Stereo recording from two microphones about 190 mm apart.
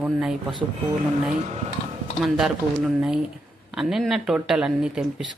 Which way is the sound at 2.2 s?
Centre (ahead or behind).